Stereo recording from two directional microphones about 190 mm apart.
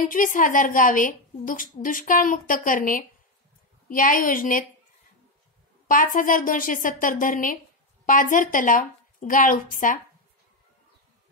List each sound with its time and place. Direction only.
0.1 s a woman's voice: 45° left (ahead or behind)
5.9 s a woman's voice: 45° left (ahead or behind)